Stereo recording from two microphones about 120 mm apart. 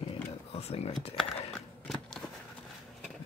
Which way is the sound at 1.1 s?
5° left (ahead or behind).